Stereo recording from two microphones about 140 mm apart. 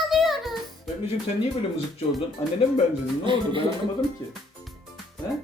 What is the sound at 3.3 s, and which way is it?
Speech, 35° right (ahead or behind).